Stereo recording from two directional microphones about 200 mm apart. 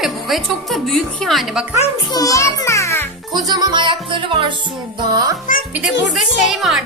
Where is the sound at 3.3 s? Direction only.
20° right (ahead or behind).